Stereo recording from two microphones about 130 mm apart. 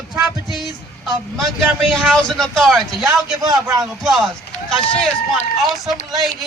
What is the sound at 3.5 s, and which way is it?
Speech, 30° right (ahead or behind).